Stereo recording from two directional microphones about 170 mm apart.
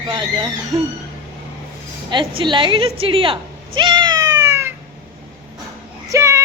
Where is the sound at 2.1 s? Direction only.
25° right (ahead or behind).